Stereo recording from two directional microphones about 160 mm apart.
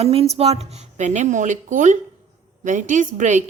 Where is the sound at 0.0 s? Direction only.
35° right (ahead or behind).